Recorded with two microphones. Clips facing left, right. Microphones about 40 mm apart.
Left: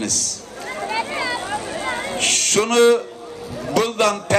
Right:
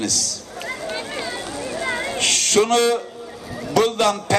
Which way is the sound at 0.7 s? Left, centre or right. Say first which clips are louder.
Left 2 dB; left.